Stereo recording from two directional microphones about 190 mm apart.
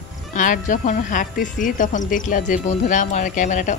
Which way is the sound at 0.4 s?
45° left (ahead or behind).